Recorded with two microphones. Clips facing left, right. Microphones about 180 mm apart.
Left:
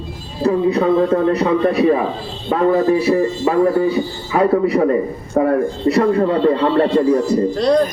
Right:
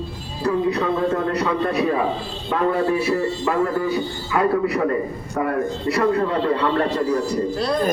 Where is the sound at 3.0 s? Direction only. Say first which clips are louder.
Left 5 dB; 20° left (ahead or behind).